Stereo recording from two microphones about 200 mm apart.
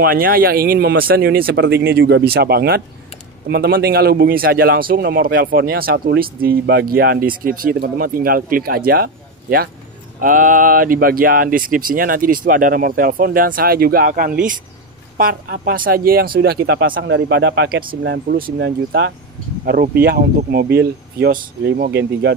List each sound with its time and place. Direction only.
0.0 s a man's voice: 50° right (ahead or behind)